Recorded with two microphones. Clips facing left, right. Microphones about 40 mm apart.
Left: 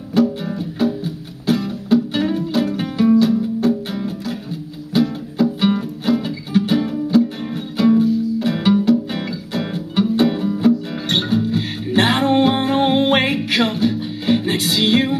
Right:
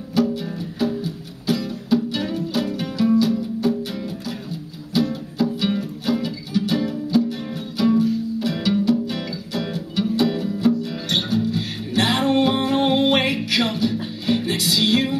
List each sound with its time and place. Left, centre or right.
0.5 s music: centre
1.0 s music: left
3.1 s music: centre
4.9 s music: centre
6.2 s music: left
7.8 s music: centre
8.5 s music: left